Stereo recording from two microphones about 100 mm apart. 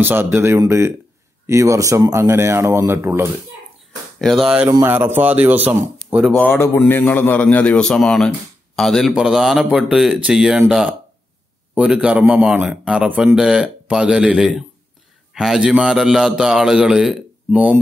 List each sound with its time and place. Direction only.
0.0 s speech: 20° right (ahead or behind)
4.2 s a man's voice: centre (ahead or behind)
4.8 s speech: 20° right (ahead or behind)
6.5 s a man's voice: 25° left (ahead or behind); by 17.7 s 10° right (ahead or behind)